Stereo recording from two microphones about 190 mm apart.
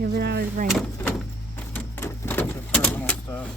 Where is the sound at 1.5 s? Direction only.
10° left (ahead or behind).